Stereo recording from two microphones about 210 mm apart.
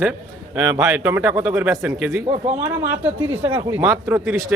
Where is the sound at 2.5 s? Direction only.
35° right (ahead or behind).